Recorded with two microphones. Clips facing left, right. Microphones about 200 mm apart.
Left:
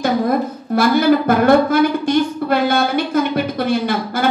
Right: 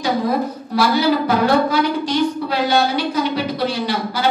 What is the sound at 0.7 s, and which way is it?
A woman's voice, 55° left (ahead or behind).